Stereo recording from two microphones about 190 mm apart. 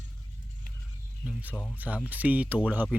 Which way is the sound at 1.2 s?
10° right (ahead or behind).